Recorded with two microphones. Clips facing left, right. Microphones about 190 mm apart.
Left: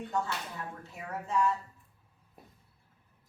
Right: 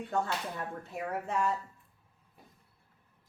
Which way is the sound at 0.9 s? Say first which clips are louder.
Left 1 dB; 55° right (ahead or behind).